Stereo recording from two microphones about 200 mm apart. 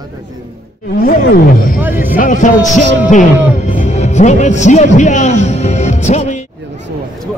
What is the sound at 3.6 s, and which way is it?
A man's voice, 35° left (ahead or behind).